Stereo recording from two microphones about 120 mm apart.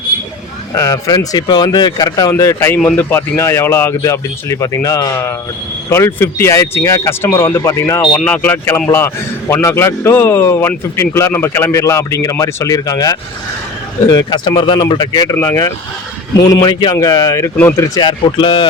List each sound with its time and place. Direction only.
0.7 s speech: 30° left (ahead or behind)
8.1 s speech: 10° left (ahead or behind); by 17.5 s 25° left (ahead or behind)
17.6 s speech: 15° left (ahead or behind)
17.9 s speech: 40° left (ahead or behind)